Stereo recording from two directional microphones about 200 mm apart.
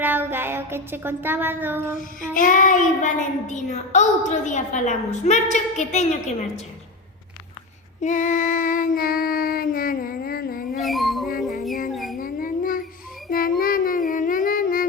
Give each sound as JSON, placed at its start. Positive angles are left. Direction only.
{"t": 0.0, "sound": "child singing", "side_deg": -10}
{"t": 2.3, "sound": "a child's voice", "side_deg": 40}
{"t": 8.0, "sound": "child singing", "side_deg": 40}
{"t": 10.8, "sound": "dog", "side_deg": 0}
{"t": 11.9, "sound": "a sound", "side_deg": 0}
{"t": 12.1, "sound": "dog", "side_deg": 45}
{"t": 13.3, "sound": "child singing", "side_deg": 45}